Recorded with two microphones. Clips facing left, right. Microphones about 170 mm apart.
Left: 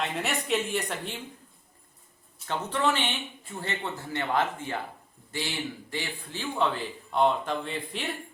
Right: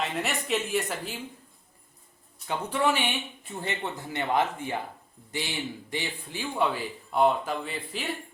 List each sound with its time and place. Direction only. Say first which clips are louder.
0.0 s speech: even; centre (ahead or behind)
2.5 s a man's voice: right 1 dB; 10° right (ahead or behind)